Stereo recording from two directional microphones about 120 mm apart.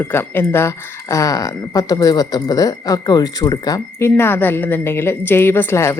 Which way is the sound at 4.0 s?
20° left (ahead or behind).